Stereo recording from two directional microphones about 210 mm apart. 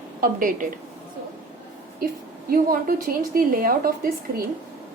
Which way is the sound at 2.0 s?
45° right (ahead or behind).